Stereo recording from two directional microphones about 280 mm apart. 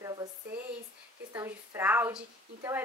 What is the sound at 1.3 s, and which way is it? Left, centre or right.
A woman's voice, centre.